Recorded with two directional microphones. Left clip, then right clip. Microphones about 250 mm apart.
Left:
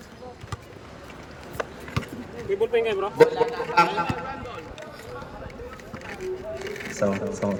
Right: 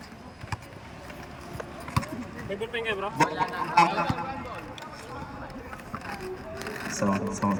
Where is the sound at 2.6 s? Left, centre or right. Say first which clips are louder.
Left 7 dB; centre.